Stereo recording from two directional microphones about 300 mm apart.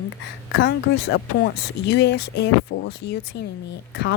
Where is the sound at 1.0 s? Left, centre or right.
Left.